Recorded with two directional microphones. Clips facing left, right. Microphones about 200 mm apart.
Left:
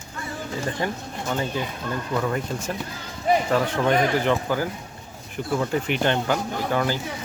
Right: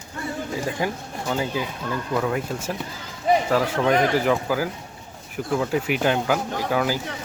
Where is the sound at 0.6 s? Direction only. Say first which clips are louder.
Right 1 dB; 10° right (ahead or behind).